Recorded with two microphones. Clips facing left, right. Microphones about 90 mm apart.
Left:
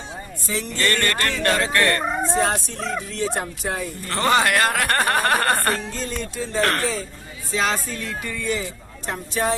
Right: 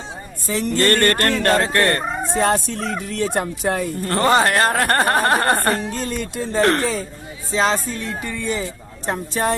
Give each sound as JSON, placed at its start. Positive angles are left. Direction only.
{"t": 0.5, "sound": "speech", "side_deg": -45}
{"t": 2.4, "sound": "speech", "side_deg": -60}
{"t": 4.2, "sound": "speech", "side_deg": -35}
{"t": 5.9, "sound": "speech", "side_deg": -55}
{"t": 7.5, "sound": "music", "side_deg": -30}
{"t": 9.0, "sound": "speech", "side_deg": -40}